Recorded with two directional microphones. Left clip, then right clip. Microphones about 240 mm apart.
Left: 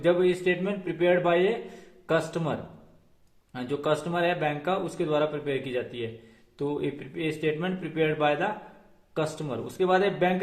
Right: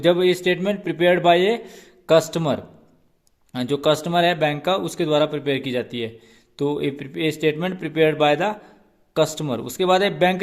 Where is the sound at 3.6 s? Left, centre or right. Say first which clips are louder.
Right 8 dB; right.